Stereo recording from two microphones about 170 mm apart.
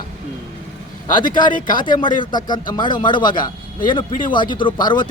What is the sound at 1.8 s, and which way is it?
Speech, 25° left (ahead or behind).